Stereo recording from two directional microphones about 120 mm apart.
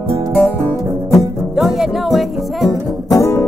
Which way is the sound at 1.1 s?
Centre (ahead or behind).